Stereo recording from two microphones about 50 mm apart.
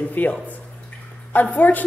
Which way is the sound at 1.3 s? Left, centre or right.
Left.